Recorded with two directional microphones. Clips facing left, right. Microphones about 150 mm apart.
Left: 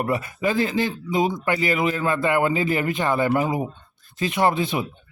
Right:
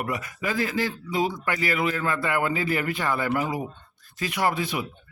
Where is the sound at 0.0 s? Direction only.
30° left (ahead or behind).